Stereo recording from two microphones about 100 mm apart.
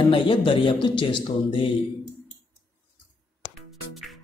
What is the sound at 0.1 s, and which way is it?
Speech, 55° left (ahead or behind).